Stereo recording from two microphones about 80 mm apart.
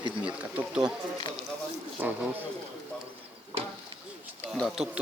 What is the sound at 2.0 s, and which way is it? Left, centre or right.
Speech, right.